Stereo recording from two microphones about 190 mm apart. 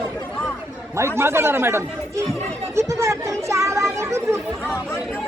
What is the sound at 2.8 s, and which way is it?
Chatter, 15° right (ahead or behind).